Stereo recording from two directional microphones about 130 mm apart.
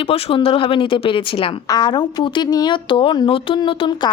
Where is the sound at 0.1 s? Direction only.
45° left (ahead or behind).